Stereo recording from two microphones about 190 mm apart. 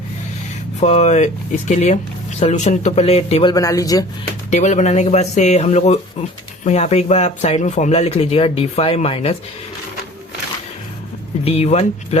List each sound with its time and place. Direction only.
0.8 s speech: 35° left (ahead or behind)
3.5 s speech: 20° left (ahead or behind)
4.5 s speech: 40° left (ahead or behind)
11.4 s speech: 30° left (ahead or behind)